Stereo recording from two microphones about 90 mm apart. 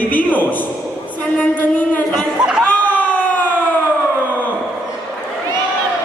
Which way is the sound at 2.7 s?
20° left (ahead or behind).